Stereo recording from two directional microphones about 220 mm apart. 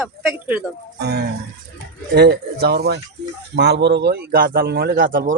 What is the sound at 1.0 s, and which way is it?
Speech, 50° right (ahead or behind).